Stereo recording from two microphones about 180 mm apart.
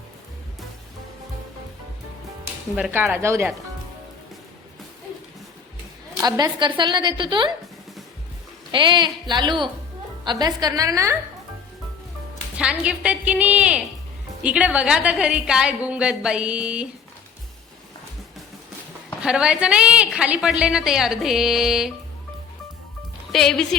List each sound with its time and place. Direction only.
2.7 s a woman's voice: 10° right (ahead or behind)
6.2 s a woman's voice: 20° right (ahead or behind)
8.7 s a woman's voice: 25° right (ahead or behind)
12.8 s a woman's voice: 5° right (ahead or behind)
19.2 s a woman's voice: 5° right (ahead or behind)
23.3 s a woman's voice: 5° left (ahead or behind)